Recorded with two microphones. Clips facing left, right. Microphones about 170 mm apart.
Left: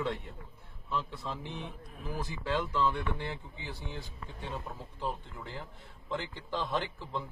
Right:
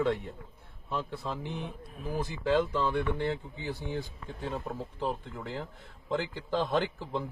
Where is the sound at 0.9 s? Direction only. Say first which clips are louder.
Right 2 dB; 45° right (ahead or behind).